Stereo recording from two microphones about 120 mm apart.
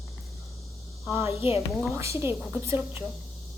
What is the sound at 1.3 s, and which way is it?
Speech, 55° left (ahead or behind).